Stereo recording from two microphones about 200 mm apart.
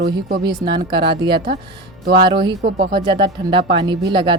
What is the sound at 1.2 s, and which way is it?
Speech, 55° right (ahead or behind).